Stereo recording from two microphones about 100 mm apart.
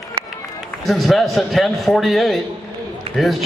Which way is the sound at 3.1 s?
75° right (ahead or behind).